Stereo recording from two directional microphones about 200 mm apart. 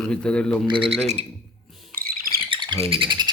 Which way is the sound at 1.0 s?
35° right (ahead or behind).